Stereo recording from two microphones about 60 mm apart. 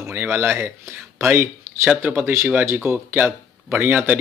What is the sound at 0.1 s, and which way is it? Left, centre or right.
A man's voice, right.